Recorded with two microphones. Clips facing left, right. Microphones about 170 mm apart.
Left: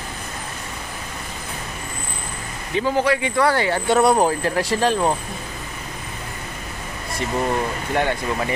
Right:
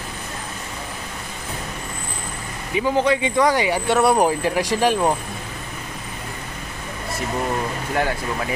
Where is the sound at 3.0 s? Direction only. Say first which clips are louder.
Right 1 dB; 20° right (ahead or behind).